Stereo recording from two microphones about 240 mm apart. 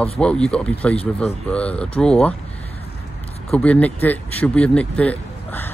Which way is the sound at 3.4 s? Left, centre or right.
Centre.